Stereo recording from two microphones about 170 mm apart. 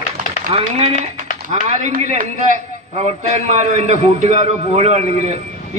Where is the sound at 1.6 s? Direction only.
45° right (ahead or behind).